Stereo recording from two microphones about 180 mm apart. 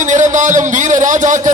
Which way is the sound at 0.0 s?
45° right (ahead or behind).